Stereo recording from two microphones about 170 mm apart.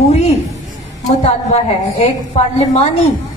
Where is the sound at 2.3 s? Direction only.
40° left (ahead or behind).